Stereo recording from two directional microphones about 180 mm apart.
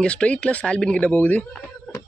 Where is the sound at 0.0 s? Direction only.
5° left (ahead or behind).